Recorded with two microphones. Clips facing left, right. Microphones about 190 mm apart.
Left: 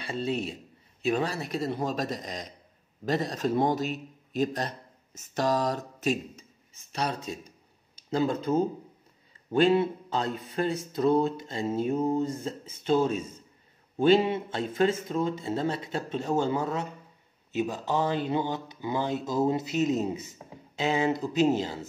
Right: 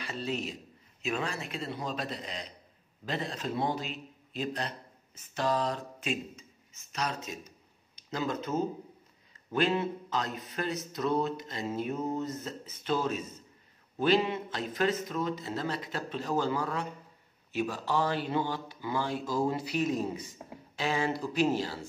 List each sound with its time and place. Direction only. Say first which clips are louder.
0.0 s a man's voice: left 4 dB; 30° left (ahead or behind)